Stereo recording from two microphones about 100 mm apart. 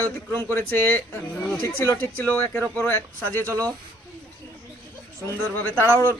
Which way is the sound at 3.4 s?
30° right (ahead or behind).